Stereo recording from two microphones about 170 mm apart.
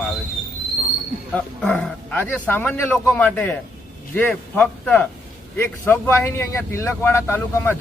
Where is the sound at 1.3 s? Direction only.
5° left (ahead or behind).